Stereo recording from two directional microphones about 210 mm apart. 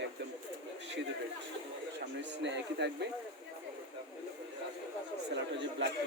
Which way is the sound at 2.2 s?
60° right (ahead or behind).